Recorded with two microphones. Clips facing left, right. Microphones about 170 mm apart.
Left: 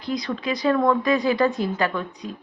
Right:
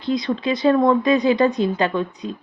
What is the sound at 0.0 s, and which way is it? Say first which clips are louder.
Speech: right 5 dB; 25° right (ahead or behind).